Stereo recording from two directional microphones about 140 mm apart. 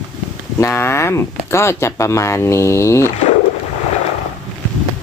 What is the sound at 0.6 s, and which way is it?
Speech, 20° left (ahead or behind).